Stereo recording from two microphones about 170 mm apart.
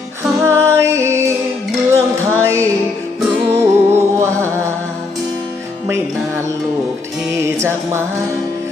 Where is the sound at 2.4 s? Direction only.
15° right (ahead or behind).